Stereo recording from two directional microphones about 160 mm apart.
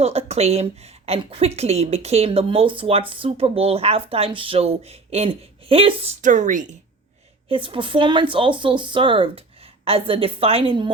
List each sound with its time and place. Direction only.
0.0 s a woman's voice: 40° right (ahead or behind)
6.2 s speech: 50° right (ahead or behind)
7.4 s a woman's voice: 35° right (ahead or behind)